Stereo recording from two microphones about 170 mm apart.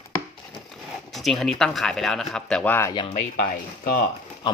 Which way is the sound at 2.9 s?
25° left (ahead or behind).